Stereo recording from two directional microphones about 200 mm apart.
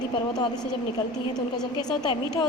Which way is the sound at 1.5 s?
20° left (ahead or behind).